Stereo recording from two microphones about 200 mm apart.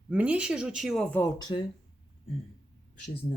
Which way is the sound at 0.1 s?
5° right (ahead or behind).